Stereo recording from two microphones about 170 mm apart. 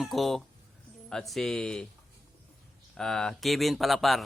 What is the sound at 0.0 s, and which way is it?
Speech, centre (ahead or behind).